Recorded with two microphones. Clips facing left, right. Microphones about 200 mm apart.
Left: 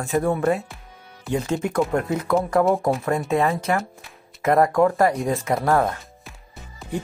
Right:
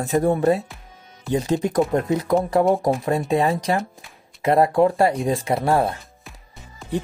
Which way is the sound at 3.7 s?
30° right (ahead or behind).